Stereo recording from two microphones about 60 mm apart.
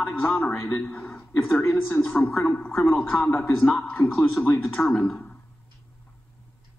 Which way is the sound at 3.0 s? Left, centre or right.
Left.